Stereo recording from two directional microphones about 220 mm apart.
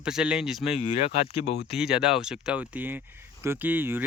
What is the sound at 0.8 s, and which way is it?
Speech, 25° left (ahead or behind).